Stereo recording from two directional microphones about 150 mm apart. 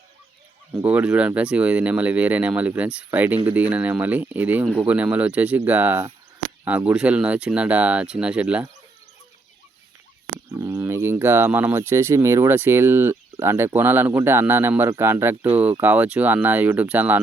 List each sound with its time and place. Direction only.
0.7 s speech: 15° right (ahead or behind)
10.5 s speech: 20° right (ahead or behind)